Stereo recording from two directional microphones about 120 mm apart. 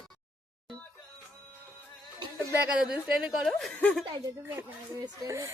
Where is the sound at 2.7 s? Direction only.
5° right (ahead or behind); by 4.0 s 10° left (ahead or behind).